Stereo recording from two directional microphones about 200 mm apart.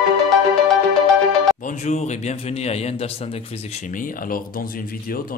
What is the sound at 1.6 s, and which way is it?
Speech, 40° left (ahead or behind).